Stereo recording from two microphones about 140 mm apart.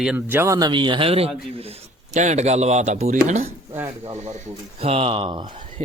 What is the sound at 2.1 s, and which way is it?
A man's voice, 55° right (ahead or behind).